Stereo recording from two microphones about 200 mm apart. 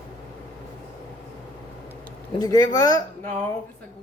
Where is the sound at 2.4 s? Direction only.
20° left (ahead or behind).